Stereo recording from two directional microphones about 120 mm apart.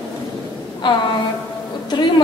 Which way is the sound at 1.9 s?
40° left (ahead or behind).